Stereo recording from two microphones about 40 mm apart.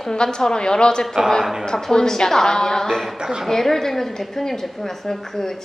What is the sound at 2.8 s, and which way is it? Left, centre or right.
A woman's voice, centre.